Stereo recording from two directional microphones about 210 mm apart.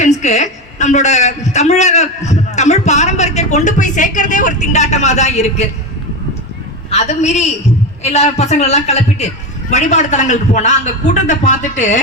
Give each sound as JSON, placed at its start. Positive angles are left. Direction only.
{"t": 0.0, "sound": "a woman's voice", "side_deg": 35}
{"t": 6.9, "sound": "a man's voice", "side_deg": 30}